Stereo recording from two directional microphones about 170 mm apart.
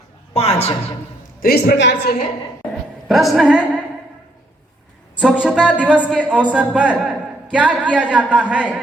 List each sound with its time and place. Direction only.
0.3 s a woman's voice: 40° left (ahead or behind)
1.4 s a woman's voice: 65° left (ahead or behind); by 2.1 s 85° left
3.1 s a woman's voice: centre (ahead or behind)
5.2 s speech: 5° right (ahead or behind)